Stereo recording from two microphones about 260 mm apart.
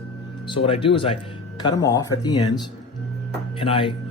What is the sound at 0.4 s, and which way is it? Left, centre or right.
Speech, centre.